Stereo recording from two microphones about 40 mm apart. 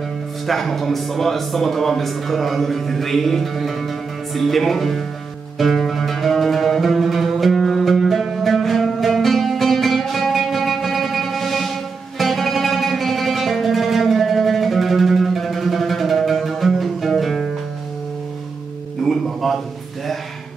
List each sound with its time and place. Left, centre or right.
0.5 s speech: centre
5.6 s music: centre
19.0 s music: centre